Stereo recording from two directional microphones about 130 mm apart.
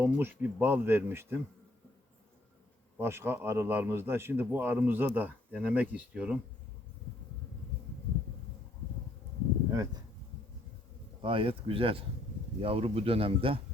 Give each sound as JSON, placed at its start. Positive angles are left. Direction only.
{"t": 0.0, "sound": "a man's voice", "side_deg": -15}
{"t": 3.0, "sound": "a man's voice", "side_deg": -20}
{"t": 9.7, "sound": "speech", "side_deg": -25}
{"t": 11.2, "sound": "speech", "side_deg": -40}